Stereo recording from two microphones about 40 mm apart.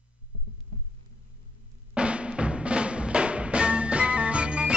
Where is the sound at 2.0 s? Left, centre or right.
Right.